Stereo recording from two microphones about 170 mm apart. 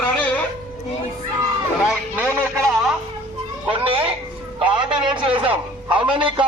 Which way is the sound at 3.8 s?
35° right (ahead or behind).